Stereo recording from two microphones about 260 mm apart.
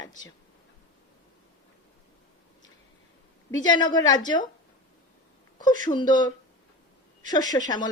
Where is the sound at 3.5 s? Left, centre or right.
Centre.